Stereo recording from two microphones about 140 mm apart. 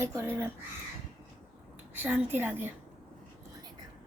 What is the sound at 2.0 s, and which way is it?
Speech, 15° right (ahead or behind).